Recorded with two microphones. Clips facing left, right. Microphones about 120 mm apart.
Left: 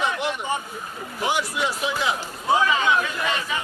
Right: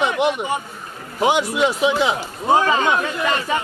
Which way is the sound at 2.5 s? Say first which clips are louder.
Right 3 dB; 45° right (ahead or behind).